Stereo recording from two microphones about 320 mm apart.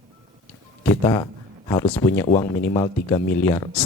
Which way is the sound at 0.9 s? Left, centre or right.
Centre.